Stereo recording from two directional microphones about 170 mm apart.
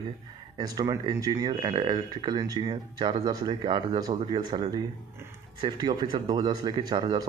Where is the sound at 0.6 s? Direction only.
25° right (ahead or behind).